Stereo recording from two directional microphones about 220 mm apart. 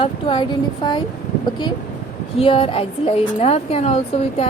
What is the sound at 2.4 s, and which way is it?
A woman's voice, 25° left (ahead or behind).